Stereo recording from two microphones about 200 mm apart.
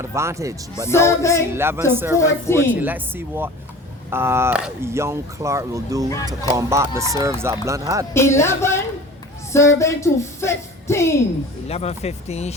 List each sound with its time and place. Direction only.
0.0 s speech: 15° right (ahead or behind)
0.9 s speech: 15° left (ahead or behind)
1.5 s speech: 10° right (ahead or behind)
2.1 s speech: 15° left (ahead or behind)
2.8 s speech: 10° right (ahead or behind)
8.1 s speech: 15° left (ahead or behind)
11.7 s speech: 30° left (ahead or behind)